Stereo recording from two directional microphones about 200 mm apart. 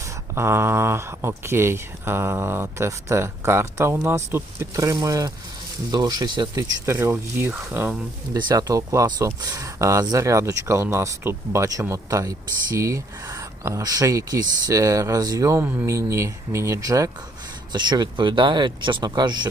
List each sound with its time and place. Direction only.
0.3 s speech: 10° right (ahead or behind)